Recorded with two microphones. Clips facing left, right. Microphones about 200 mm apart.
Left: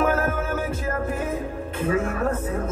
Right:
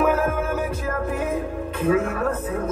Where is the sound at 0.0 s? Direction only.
60° right (ahead or behind).